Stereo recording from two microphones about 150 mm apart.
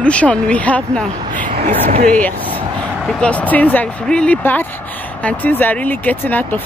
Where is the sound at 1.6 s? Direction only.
65° right (ahead or behind).